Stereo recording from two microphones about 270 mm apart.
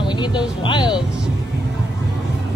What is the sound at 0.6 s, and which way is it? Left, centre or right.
Music, centre.